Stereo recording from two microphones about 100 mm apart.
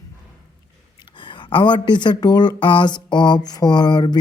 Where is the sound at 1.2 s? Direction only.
55° left (ahead or behind).